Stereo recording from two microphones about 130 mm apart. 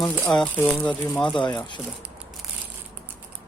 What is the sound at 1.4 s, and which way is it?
Speech, 35° left (ahead or behind).